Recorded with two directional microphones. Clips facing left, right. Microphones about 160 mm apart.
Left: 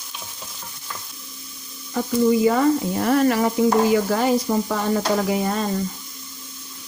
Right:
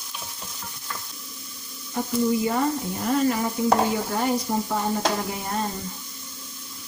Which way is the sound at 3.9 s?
90° left.